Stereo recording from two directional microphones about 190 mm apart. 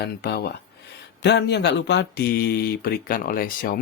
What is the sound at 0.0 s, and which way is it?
Speech, 60° left (ahead or behind).